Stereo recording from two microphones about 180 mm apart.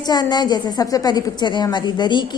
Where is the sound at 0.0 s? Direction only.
25° left (ahead or behind).